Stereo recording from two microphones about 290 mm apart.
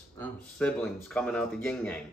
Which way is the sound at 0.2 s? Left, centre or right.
Centre.